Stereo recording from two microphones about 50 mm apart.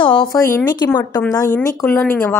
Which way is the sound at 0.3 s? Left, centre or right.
Left.